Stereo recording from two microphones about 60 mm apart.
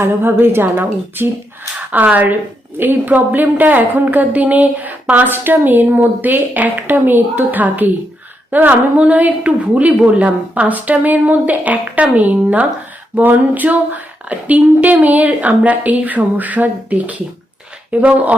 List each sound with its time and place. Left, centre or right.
0.0 s a woman's voice: right